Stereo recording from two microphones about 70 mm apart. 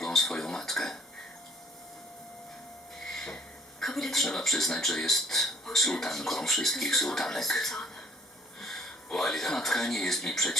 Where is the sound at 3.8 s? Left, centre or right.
Centre.